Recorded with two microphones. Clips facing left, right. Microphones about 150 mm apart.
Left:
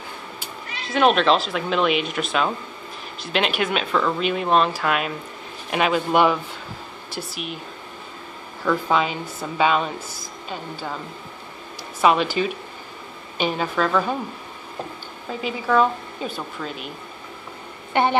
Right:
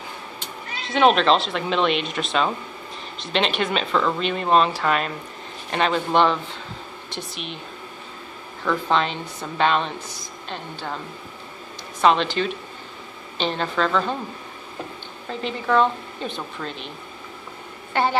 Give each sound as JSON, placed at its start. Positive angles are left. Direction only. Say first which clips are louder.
{"t": 0.4, "sound": "a woman's voice", "louder": "even", "side_deg": 0}
{"t": 8.6, "sound": "a woman's voice", "louder": "left 1 dB", "side_deg": 5}
{"t": 12.0, "sound": "a woman's voice", "louder": "even", "side_deg": 10}
{"t": 15.2, "sound": "a woman's voice", "louder": "even", "side_deg": 5}
{"t": 17.9, "sound": "a woman's voice", "louder": "left 2 dB", "side_deg": 20}